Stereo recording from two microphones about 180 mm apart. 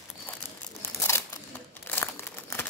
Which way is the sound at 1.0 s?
15° left (ahead or behind).